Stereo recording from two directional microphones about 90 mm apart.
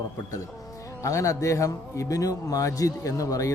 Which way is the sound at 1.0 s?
35° left (ahead or behind).